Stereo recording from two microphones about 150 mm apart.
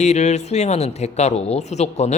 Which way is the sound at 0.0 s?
50° left (ahead or behind).